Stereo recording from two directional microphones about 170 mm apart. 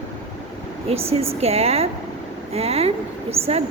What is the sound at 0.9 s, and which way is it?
A woman's voice, 35° right (ahead or behind).